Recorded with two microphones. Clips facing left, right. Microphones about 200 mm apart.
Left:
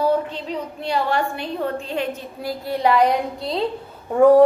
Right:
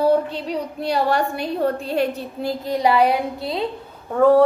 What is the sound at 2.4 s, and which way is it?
A woman's voice, 15° right (ahead or behind).